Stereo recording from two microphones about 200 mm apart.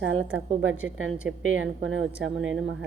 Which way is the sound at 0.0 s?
75° right (ahead or behind).